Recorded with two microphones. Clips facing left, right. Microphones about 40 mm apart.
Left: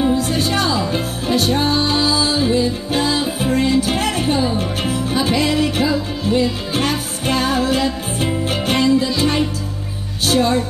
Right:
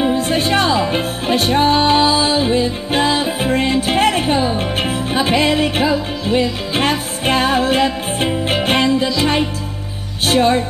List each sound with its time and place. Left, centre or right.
0.0 s music: right
10.2 s music: right